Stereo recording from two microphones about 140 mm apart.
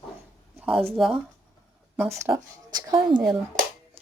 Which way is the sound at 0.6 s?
Centre (ahead or behind).